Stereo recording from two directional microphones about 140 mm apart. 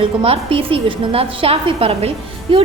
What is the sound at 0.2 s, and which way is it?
A woman's voice, 40° right (ahead or behind).